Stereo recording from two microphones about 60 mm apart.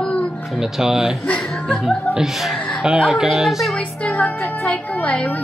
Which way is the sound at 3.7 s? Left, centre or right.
Left.